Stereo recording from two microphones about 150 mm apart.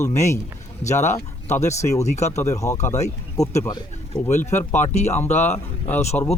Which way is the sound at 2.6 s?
15° left (ahead or behind).